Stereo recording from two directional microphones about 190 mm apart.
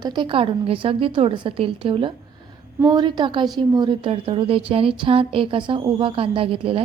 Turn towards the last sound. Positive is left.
turn(degrees=-30)  # may be behind; listen again after turning